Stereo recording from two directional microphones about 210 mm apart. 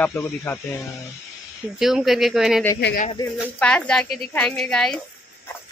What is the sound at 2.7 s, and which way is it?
Speech, 50° left (ahead or behind).